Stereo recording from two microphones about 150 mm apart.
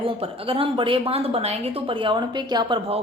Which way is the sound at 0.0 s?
35° right (ahead or behind).